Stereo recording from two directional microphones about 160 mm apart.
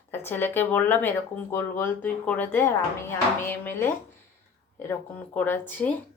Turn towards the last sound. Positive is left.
turn(degrees=10)  # may be behind; listen again after turning